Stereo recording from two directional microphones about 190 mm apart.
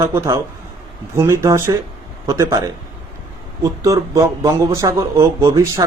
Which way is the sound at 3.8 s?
15° right (ahead or behind).